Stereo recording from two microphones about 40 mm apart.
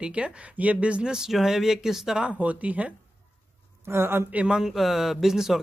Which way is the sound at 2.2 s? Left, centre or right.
Right.